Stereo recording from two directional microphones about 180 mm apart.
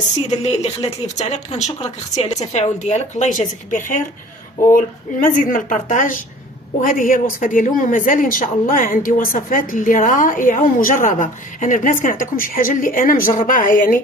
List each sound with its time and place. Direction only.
0.3 s speech: 40° left (ahead or behind)
5.2 s a woman's voice: 50° left (ahead or behind)